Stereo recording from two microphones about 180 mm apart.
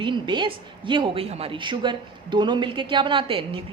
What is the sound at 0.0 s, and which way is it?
A woman's voice, 25° right (ahead or behind).